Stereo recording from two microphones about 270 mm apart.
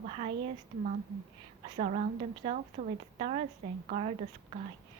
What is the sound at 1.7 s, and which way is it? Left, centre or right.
A woman's voice, right.